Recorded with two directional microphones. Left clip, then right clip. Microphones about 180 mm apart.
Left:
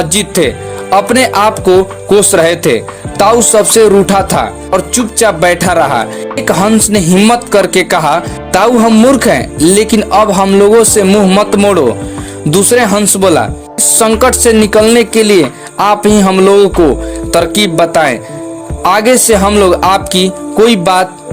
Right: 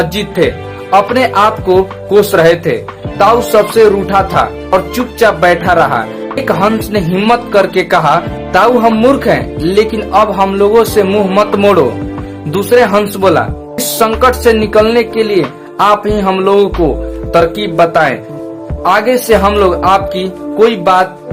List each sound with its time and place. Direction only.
0.0 s speech: 40° left (ahead or behind)